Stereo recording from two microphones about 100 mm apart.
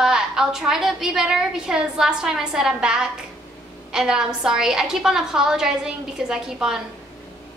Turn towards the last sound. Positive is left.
turn(degrees=-5)  # may be behind; listen again after turning